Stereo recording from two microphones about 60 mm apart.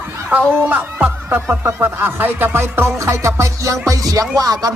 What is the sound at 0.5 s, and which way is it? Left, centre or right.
Speech, right.